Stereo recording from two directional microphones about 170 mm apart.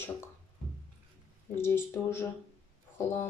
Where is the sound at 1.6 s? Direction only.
15° left (ahead or behind).